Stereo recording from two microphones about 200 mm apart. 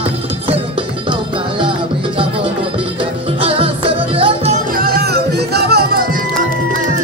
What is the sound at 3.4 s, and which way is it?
Music, 25° right (ahead or behind).